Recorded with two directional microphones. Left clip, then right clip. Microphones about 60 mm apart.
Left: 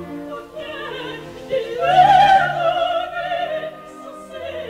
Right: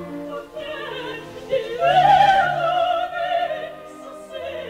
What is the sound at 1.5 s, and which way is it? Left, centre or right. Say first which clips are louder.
Opera: left 2 dB; right.